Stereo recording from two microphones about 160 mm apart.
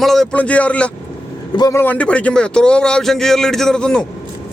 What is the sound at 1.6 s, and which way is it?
Speech, 20° left (ahead or behind).